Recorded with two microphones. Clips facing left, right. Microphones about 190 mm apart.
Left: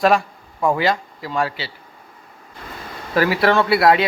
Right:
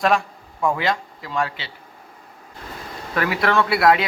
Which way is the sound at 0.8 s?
5° left (ahead or behind).